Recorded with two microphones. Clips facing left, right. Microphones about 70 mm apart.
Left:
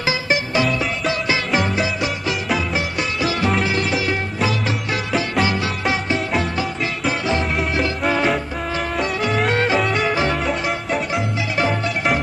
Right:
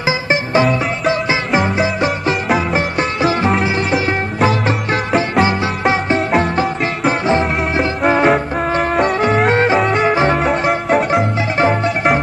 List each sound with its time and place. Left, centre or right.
0.3 s music: right
1.8 s music: right
6.1 s music: right
8.3 s music: right
10.4 s music: right
11.5 s music: right